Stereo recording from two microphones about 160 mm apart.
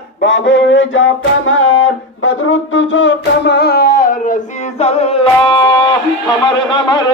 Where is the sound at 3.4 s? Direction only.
90° left; by 4.4 s 60° left (ahead or behind).